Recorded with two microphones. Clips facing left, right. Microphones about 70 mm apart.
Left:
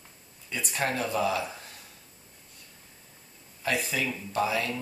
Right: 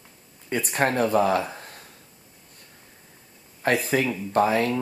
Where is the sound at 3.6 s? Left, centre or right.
Right.